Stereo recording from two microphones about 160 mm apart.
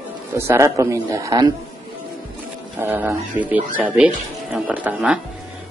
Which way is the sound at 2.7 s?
10° right (ahead or behind).